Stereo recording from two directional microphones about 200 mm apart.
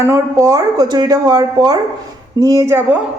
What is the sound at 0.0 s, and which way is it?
Speech, 15° right (ahead or behind).